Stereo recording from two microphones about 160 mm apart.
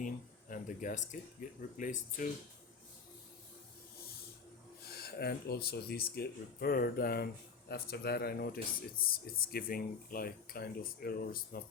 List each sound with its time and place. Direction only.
0.5 s speech: 55° left (ahead or behind)
4.8 s speech: 80° left
7.7 s speech: 85° left; by 11.6 s 70° left (ahead or behind)